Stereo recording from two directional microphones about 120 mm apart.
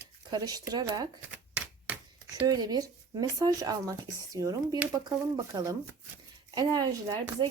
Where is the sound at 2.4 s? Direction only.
35° right (ahead or behind).